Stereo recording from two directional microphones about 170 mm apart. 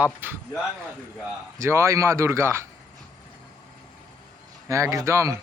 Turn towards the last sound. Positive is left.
turn(degrees=-15)  # may be behind; listen again after turning